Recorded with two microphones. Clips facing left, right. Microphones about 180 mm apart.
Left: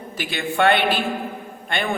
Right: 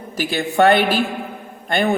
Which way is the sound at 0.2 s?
40° right (ahead or behind).